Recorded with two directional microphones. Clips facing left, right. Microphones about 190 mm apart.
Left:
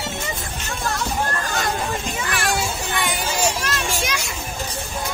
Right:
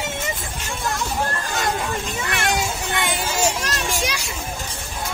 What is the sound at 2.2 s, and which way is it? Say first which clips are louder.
Children playing: right 1 dB; 20° right (ahead or behind).